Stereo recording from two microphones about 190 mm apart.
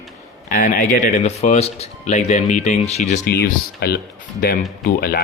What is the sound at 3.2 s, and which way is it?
Speech, 55° left (ahead or behind).